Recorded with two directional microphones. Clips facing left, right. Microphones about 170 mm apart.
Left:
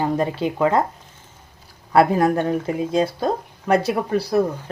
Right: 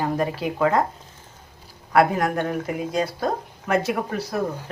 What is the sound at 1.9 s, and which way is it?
Speech, 30° left (ahead or behind).